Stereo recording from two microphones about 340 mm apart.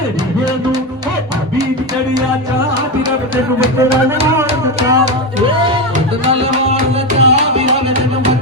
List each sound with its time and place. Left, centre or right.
3.6 s music: centre
7.2 s music: centre